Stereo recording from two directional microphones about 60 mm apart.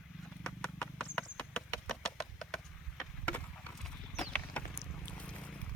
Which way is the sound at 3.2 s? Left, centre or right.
Left.